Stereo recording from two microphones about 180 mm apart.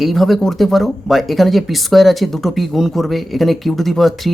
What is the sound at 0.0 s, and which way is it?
Speech, centre (ahead or behind).